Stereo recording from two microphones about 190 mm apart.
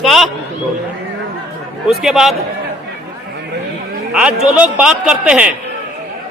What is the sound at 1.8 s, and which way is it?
Speech, centre (ahead or behind).